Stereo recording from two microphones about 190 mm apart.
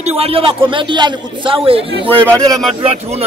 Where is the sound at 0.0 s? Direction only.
30° right (ahead or behind).